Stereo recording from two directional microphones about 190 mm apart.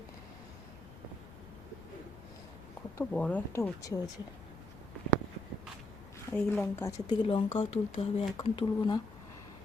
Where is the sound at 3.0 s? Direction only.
5° left (ahead or behind).